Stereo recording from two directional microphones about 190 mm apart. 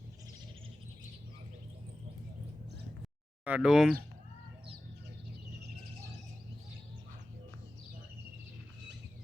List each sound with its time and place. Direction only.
3.4 s speech: 5° right (ahead or behind)